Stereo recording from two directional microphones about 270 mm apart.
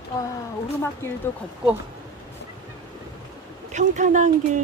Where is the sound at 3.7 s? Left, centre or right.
Right.